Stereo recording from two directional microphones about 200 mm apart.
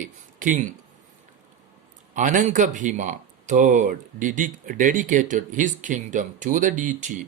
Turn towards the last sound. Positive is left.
turn(degrees=-40)  # may be behind; listen again after turning